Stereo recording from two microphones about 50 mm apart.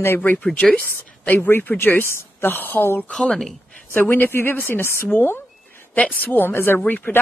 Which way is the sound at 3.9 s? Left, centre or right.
Left.